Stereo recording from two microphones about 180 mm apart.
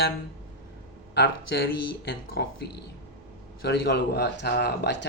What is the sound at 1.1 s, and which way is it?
Speech, 70° left (ahead or behind).